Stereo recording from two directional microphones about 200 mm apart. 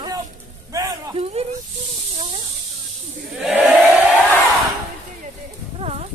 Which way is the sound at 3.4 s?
10° right (ahead or behind).